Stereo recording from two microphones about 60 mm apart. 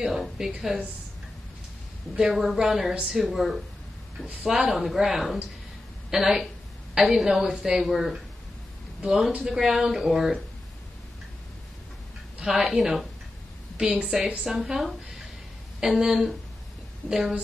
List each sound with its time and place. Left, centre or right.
0.0 s speech: centre
2.1 s speech: centre
3.2 s speech: centre
12.4 s speech: centre
13.7 s speech: centre
14.4 s speech: centre